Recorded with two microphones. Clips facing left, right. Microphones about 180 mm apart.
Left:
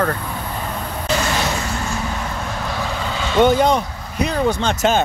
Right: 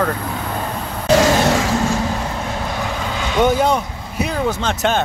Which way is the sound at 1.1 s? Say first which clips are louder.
Right 8 dB; 90° right.